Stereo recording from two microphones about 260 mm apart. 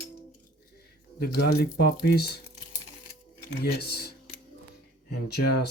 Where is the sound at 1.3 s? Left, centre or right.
Left.